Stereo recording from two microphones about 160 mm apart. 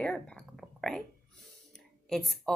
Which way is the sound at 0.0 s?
5° left (ahead or behind).